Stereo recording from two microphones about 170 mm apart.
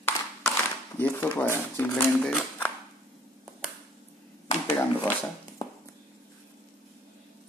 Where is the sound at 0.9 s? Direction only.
10° left (ahead or behind).